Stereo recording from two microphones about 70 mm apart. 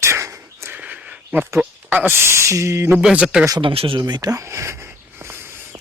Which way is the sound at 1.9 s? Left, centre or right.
Right.